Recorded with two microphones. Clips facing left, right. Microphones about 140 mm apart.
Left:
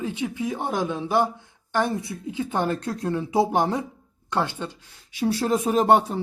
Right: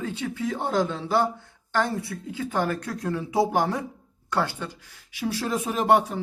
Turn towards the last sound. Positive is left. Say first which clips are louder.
# left 3 dB
turn(degrees=35)  # may be behind; listen again after turning